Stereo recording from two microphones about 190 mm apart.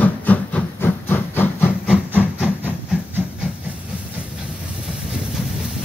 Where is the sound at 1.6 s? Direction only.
5° right (ahead or behind).